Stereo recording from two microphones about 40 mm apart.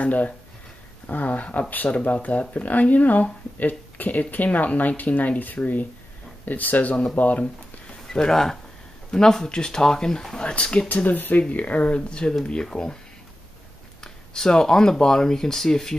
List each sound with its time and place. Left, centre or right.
0.0 s speech: left
8.1 s speech: centre
10.4 s speech: left
10.9 s speech: left
11.4 s speech: left; by 12.9 s centre
14.0 s speech: centre